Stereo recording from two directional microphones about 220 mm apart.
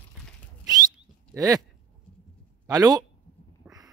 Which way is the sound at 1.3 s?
15° right (ahead or behind).